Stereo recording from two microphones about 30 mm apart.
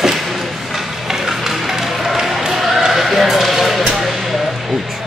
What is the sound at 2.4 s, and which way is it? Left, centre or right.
Horse, centre.